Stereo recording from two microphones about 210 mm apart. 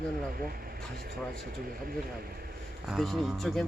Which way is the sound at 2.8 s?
Centre (ahead or behind).